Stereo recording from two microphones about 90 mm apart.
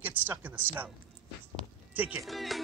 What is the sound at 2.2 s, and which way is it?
Speech, centre (ahead or behind).